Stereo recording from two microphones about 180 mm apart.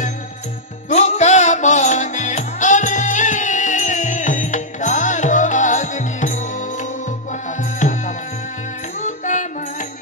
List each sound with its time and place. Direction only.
0.8 s music: 40° left (ahead or behind)